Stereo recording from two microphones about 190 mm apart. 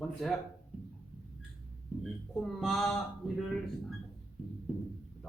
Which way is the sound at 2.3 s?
Centre (ahead or behind).